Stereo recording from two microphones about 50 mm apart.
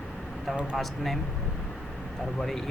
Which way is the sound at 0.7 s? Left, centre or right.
Centre.